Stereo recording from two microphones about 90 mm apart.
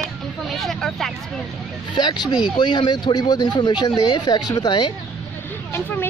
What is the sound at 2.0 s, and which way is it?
Speech, 50° left (ahead or behind).